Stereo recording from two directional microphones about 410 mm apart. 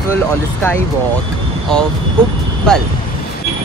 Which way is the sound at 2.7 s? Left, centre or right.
Centre.